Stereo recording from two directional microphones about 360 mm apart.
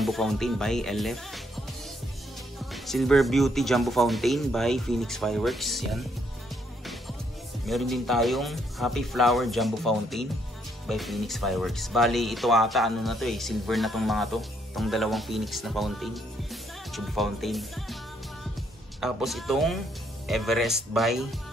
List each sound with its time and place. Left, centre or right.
0.0 s speech: centre
2.7 s speech: centre
7.6 s speech: centre
18.9 s speech: centre